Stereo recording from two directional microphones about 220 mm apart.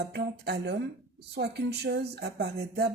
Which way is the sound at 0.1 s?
50° right (ahead or behind).